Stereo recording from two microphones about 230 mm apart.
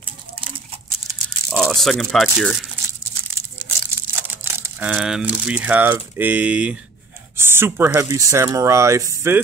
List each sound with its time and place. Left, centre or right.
0.0 s crumpling: right
1.5 s speech: centre
3.3 s crumpling: centre
7.3 s speech: centre